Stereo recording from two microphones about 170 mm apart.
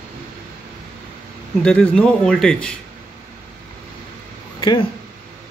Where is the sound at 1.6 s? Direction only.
5° left (ahead or behind).